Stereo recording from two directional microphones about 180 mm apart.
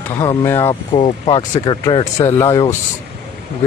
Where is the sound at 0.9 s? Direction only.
30° left (ahead or behind).